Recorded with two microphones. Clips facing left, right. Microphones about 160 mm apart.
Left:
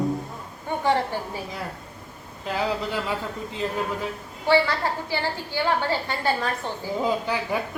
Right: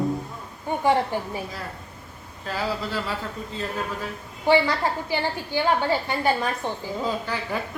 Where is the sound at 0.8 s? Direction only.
15° right (ahead or behind).